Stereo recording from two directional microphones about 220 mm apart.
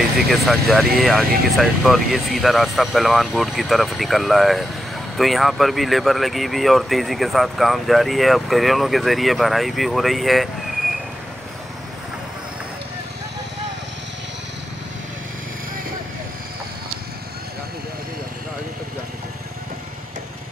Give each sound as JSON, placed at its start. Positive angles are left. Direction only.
{"t": 0.3, "sound": "speech", "side_deg": 0}